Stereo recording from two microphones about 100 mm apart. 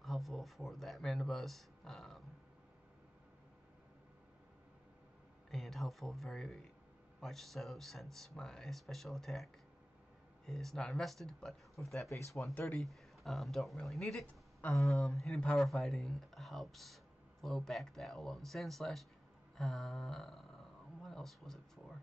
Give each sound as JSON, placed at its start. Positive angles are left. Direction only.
{"t": 0.0, "sound": "speech", "side_deg": 0}
{"t": 5.5, "sound": "speech", "side_deg": 0}
{"t": 12.1, "sound": "speech", "side_deg": 30}
{"t": 12.5, "sound": "speech", "side_deg": 15}
{"t": 12.8, "sound": "speech", "side_deg": 0}
{"t": 14.2, "sound": "a sound", "side_deg": 15}
{"t": 14.8, "sound": "speech", "side_deg": 0}
{"t": 19.5, "sound": "a sound", "side_deg": 5}